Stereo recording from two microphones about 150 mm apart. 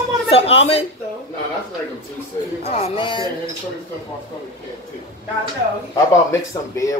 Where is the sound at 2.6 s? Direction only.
45° left (ahead or behind).